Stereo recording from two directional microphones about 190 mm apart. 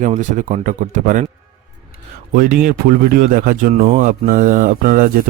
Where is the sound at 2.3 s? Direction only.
50° right (ahead or behind).